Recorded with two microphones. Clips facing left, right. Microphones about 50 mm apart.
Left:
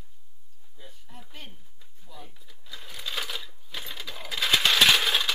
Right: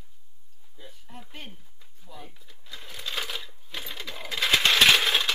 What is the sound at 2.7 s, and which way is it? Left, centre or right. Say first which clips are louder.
Coin: even; centre.